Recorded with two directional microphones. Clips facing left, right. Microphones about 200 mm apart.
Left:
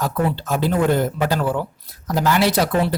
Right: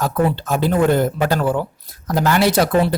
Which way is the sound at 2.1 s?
55° right (ahead or behind).